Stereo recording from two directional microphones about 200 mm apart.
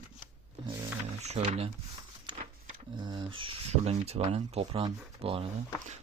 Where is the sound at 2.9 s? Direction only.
20° right (ahead or behind).